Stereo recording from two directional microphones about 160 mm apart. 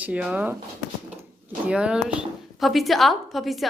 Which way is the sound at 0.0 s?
5° right (ahead or behind).